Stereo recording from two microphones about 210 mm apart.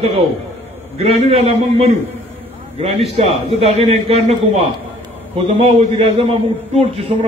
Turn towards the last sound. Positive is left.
turn(degrees=-30)  # may be behind; listen again after turning